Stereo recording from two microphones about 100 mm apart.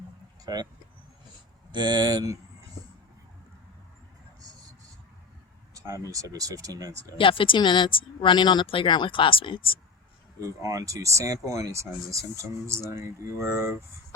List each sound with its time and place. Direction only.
0.4 s speech: 45° right (ahead or behind)
1.7 s speech: 45° right (ahead or behind)
5.7 s a sound: 30° right (ahead or behind)
6.1 s speech: 35° right (ahead or behind)
7.2 s speech: 60° left (ahead or behind)
8.6 s speech: 60° left (ahead or behind)
10.4 s speech: 35° right (ahead or behind)